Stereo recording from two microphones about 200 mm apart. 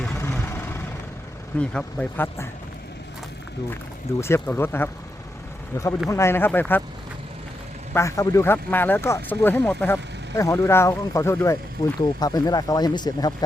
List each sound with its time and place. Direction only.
0.0 s vehicle: 10° left (ahead or behind)
1.5 s speech: 5° left (ahead or behind)
4.2 s speech: 10° left (ahead or behind)
7.9 s speech: 15° left (ahead or behind)